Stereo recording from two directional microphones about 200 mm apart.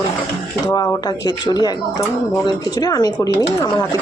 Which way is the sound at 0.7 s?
15° left (ahead or behind).